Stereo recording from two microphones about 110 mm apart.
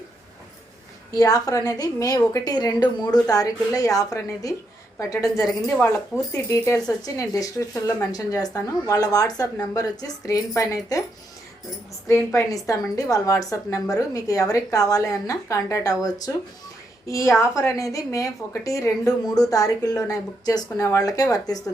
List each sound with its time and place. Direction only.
1.1 s a woman's voice: 30° left (ahead or behind)
7.7 s a woman's voice: 20° left (ahead or behind)
8.1 s a woman's voice: 35° left (ahead or behind)
12.0 s a woman's voice: 25° left (ahead or behind)